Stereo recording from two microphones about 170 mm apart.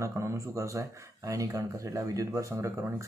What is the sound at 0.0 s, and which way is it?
Speech, 15° right (ahead or behind).